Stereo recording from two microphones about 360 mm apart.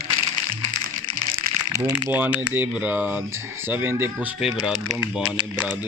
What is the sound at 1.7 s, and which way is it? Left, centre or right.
Speech, centre.